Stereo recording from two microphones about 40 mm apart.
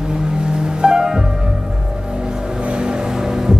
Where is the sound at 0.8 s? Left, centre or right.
Centre.